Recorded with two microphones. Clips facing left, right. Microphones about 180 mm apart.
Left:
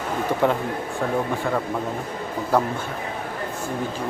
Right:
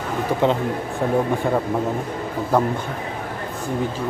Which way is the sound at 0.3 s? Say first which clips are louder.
Right 2 dB; 15° right (ahead or behind).